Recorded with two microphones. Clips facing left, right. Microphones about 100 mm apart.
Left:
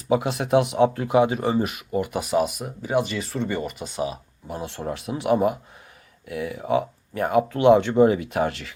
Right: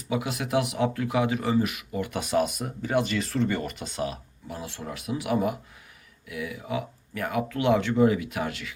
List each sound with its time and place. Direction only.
0.1 s speech: 35° left (ahead or behind)
2.0 s speech: 10° left (ahead or behind)
4.4 s speech: 30° left (ahead or behind)